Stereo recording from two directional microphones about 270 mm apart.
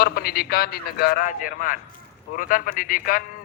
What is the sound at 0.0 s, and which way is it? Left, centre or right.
A man's voice, left.